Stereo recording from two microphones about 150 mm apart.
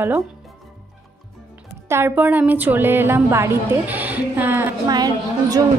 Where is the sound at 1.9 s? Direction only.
15° right (ahead or behind).